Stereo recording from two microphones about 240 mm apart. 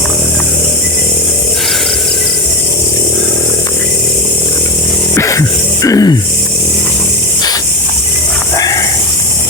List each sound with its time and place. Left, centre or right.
5.1 s music: centre
8.5 s snake: centre